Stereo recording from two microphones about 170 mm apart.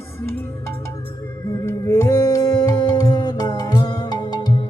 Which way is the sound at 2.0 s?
20° left (ahead or behind).